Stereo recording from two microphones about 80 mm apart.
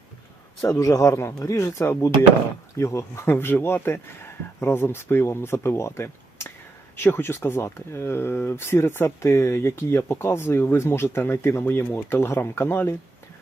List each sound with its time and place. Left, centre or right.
0.8 s speech: left